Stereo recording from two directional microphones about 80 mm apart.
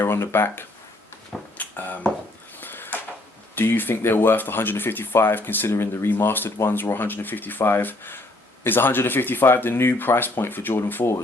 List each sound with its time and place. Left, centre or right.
0.0 s speech: left
1.5 s a sound: left
3.5 s speech: left